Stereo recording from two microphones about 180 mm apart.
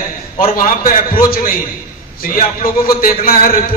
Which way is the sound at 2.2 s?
50° left (ahead or behind).